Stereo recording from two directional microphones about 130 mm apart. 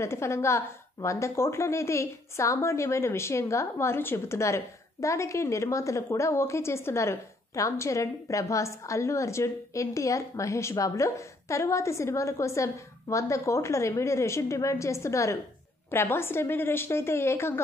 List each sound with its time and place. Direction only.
0.0 s a woman's voice: 20° left (ahead or behind)